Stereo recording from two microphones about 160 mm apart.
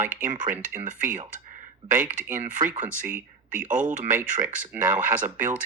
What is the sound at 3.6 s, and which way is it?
Speech, 55° right (ahead or behind).